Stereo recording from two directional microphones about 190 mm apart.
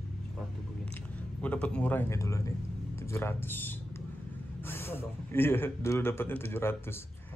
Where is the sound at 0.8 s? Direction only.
5° left (ahead or behind).